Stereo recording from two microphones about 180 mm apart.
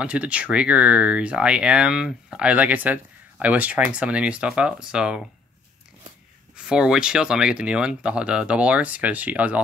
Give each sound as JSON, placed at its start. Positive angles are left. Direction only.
{"t": 0.0, "sound": "speech", "side_deg": -5}
{"t": 6.5, "sound": "speech", "side_deg": -5}